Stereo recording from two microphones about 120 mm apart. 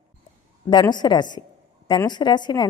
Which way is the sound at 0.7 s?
40° left (ahead or behind).